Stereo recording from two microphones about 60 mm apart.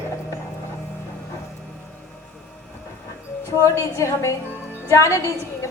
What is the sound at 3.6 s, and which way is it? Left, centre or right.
A man's voice, left.